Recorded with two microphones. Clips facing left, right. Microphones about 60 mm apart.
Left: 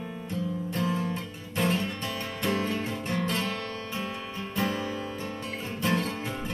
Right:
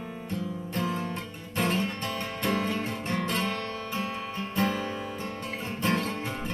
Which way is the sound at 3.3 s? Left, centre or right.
Centre.